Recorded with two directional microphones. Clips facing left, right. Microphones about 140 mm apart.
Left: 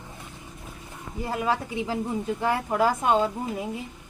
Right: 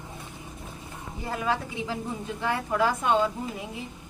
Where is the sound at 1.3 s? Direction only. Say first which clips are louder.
Left 2 dB; 35° left (ahead or behind).